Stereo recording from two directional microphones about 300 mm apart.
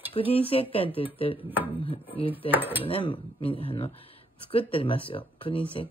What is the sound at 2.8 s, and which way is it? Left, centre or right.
Speech, centre.